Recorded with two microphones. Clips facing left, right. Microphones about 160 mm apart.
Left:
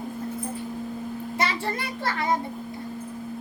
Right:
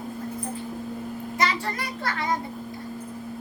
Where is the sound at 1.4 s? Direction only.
25° left (ahead or behind).